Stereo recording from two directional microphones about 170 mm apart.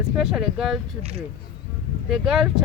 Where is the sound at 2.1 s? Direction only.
5° right (ahead or behind).